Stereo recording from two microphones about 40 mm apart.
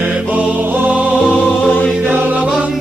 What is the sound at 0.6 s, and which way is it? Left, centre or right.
Music, right.